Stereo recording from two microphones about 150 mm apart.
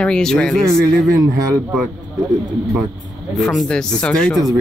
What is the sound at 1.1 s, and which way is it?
Speech, 20° right (ahead or behind).